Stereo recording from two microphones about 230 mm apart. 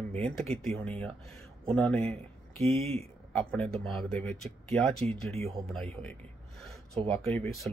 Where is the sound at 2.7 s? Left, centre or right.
Right.